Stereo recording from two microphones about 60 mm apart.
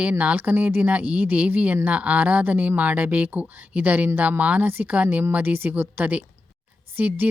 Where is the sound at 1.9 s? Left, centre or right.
Right.